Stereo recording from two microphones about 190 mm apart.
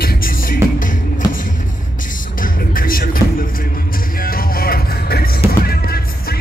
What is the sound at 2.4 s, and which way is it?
Music, 50° left (ahead or behind).